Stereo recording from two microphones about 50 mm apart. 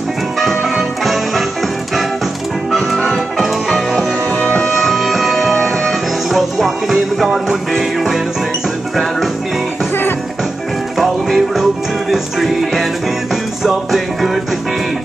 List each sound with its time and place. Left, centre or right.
0.4 s music: centre
2.7 s music: centre
4.4 s music: left
4.7 s music: centre
11.0 s music: centre